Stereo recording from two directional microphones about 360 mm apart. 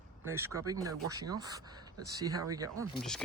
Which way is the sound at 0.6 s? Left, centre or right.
Centre.